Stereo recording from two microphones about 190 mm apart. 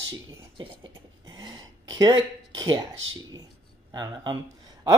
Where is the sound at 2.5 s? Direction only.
20° right (ahead or behind).